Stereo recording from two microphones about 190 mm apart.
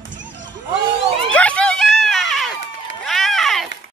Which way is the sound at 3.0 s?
Centre (ahead or behind).